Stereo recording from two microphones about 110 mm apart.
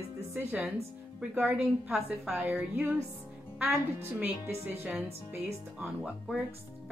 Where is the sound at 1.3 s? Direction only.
5° right (ahead or behind).